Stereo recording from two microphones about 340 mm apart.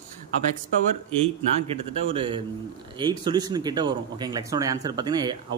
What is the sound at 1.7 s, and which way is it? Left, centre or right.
A man's voice, centre.